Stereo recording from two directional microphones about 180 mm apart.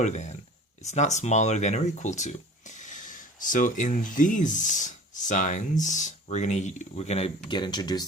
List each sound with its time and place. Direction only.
0.0 s speech: 40° left (ahead or behind); by 8.0 s 20° left (ahead or behind)